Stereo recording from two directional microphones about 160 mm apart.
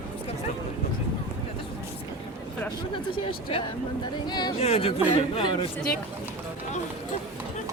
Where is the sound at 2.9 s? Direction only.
30° left (ahead or behind).